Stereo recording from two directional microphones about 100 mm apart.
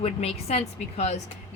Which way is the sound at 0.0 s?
90° left.